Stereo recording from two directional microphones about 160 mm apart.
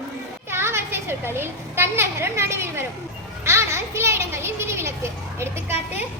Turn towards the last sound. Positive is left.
turn(degrees=-15)  # may be behind; listen again after turning